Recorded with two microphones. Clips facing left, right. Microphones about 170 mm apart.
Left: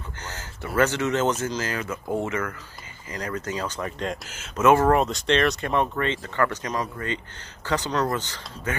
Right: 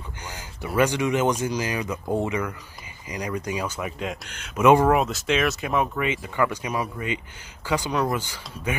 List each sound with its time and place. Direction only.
0.2 s a sound: 15° right (ahead or behind)
0.7 s speech: 15° right (ahead or behind)
4.6 s speech: 15° right (ahead or behind)
4.8 s speech: 5° right (ahead or behind)